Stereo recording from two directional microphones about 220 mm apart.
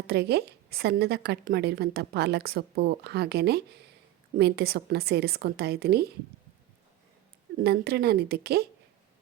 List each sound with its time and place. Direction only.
0.1 s a woman's voice: 50° right (ahead or behind)
7.6 s a woman's voice: 45° right (ahead or behind)